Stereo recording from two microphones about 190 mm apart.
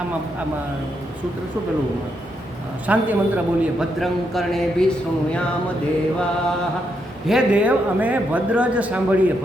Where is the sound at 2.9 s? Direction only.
10° right (ahead or behind).